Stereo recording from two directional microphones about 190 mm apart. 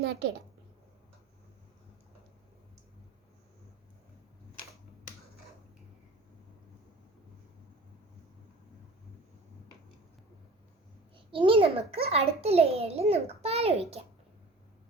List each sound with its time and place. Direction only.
0.0 s a child's voice: 60° right (ahead or behind)
11.3 s a child's voice: 25° right (ahead or behind)